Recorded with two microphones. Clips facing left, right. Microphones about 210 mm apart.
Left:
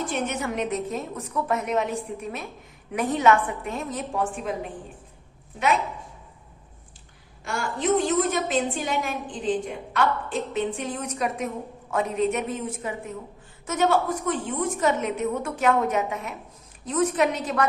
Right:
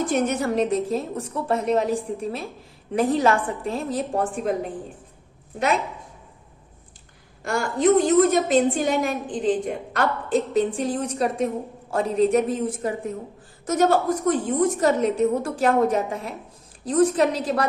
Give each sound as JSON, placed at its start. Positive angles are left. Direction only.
{"t": 0.1, "sound": "a woman's voice", "side_deg": -40}
{"t": 7.4, "sound": "a woman's voice", "side_deg": -40}